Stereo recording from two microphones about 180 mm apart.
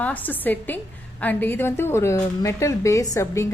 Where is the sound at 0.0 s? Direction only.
10° left (ahead or behind).